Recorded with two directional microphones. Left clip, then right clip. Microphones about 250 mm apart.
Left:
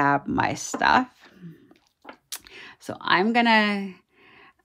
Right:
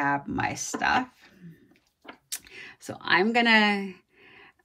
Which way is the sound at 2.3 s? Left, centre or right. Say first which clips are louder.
Even; centre.